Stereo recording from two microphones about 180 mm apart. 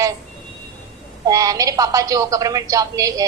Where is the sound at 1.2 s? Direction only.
20° right (ahead or behind).